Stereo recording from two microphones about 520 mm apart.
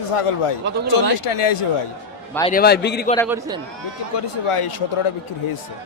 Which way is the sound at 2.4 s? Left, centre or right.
Centre.